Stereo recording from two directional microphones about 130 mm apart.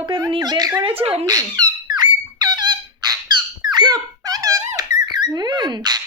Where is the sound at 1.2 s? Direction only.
30° right (ahead or behind).